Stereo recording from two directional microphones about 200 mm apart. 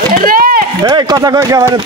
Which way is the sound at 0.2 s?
45° right (ahead or behind).